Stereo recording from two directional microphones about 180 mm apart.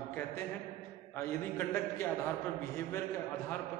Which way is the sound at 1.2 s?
15° left (ahead or behind).